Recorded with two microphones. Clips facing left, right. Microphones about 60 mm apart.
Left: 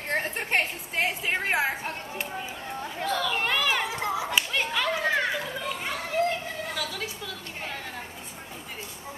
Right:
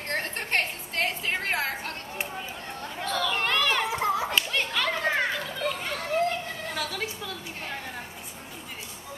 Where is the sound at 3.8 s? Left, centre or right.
Right.